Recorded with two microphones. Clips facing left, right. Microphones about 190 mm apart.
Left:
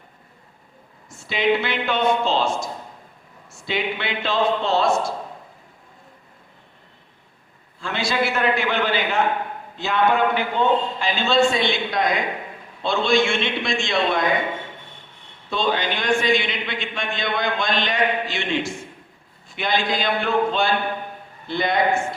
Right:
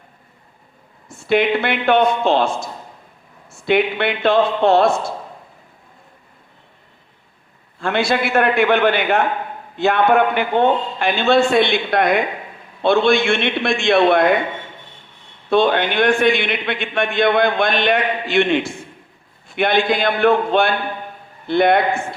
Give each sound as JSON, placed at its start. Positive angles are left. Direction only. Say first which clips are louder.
{"t": 1.0, "sound": "a man's voice", "louder": "right 5 dB", "side_deg": -60}
{"t": 3.7, "sound": "a man's voice", "louder": "right 9 dB", "side_deg": -60}
{"t": 7.8, "sound": "a man's voice", "louder": "right 5 dB", "side_deg": -60}
{"t": 15.4, "sound": "a man's voice", "louder": "right 7 dB", "side_deg": -60}